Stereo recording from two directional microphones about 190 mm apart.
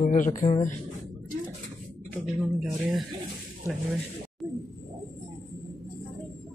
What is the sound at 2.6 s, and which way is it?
Speech, centre (ahead or behind).